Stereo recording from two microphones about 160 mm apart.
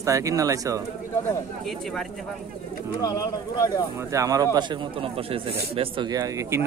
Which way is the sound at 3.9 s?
20° right (ahead or behind).